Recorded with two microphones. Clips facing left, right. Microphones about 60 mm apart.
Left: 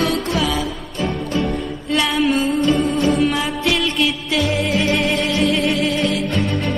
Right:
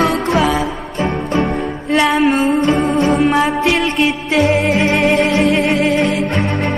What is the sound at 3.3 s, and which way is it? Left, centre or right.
Music, right.